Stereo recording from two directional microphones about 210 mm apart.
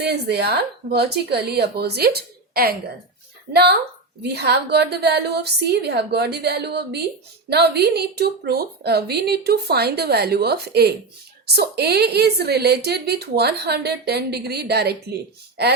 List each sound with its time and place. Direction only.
0.0 s a woman's voice: 50° right (ahead or behind)